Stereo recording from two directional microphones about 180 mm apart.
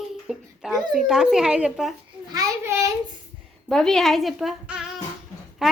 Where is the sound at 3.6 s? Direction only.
5° left (ahead or behind).